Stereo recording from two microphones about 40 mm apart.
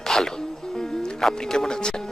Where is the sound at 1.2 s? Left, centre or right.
Centre.